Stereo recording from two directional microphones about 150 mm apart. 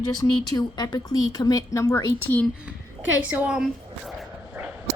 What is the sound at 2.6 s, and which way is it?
A woman's voice, 10° right (ahead or behind).